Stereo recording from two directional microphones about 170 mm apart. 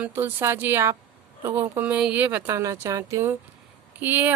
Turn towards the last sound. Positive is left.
turn(degrees=-10)  # may be behind; listen again after turning